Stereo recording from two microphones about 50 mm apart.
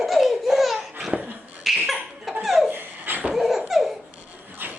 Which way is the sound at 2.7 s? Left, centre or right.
Right.